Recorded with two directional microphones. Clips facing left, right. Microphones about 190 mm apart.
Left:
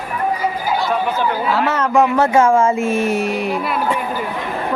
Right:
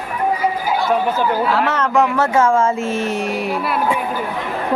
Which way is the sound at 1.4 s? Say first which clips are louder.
Even; 5° left (ahead or behind).